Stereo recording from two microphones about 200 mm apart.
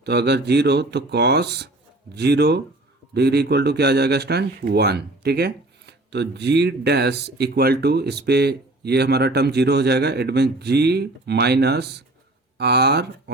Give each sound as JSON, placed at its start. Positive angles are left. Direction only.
{"t": 0.0, "sound": "speech", "side_deg": -55}